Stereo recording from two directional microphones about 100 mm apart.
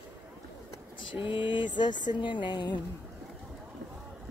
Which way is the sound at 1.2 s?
55° left (ahead or behind).